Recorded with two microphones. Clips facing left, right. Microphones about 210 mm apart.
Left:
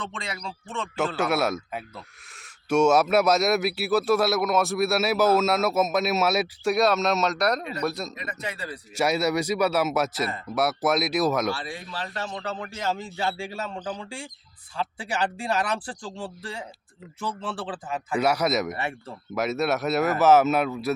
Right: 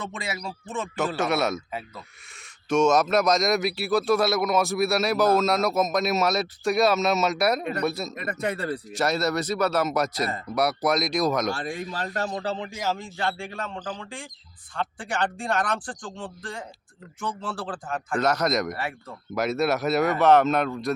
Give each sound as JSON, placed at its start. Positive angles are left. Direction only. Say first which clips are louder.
{"t": 0.1, "sound": "speech", "louder": "right 2 dB", "side_deg": -5}
{"t": 1.2, "sound": "speech", "louder": "even", "side_deg": 5}
{"t": 2.6, "sound": "speech", "louder": "left 1 dB", "side_deg": 10}
{"t": 8.1, "sound": "speech", "louder": "right 6 dB", "side_deg": -55}
{"t": 9.0, "sound": "speech", "louder": "left 2 dB", "side_deg": 10}
{"t": 11.5, "sound": "speech", "louder": "right 4 dB", "side_deg": -45}
{"t": 12.7, "sound": "speech", "louder": "even", "side_deg": -10}
{"t": 13.0, "sound": "speech", "louder": "left 1 dB", "side_deg": 10}
{"t": 18.8, "sound": "speech", "louder": "left 1 dB", "side_deg": 25}
{"t": 19.3, "sound": "speech", "louder": "right 1 dB", "side_deg": 0}